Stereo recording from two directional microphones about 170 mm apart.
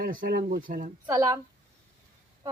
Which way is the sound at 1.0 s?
20° right (ahead or behind).